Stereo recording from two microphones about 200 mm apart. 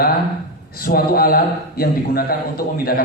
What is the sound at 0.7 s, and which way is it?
A man's voice, 45° left (ahead or behind).